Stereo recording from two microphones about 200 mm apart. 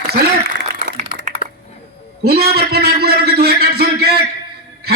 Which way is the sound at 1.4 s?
45° left (ahead or behind).